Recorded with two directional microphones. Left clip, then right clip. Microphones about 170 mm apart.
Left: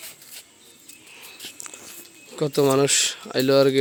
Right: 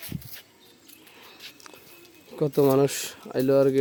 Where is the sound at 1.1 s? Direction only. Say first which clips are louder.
Left 6 dB; centre (ahead or behind).